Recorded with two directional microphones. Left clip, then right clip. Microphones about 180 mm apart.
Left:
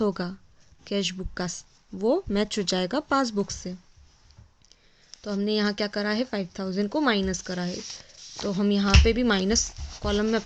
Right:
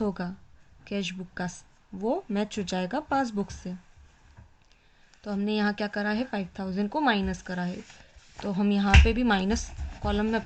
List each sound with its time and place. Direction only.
0.0 s speech: 45° left (ahead or behind)
5.2 s speech: 40° left (ahead or behind)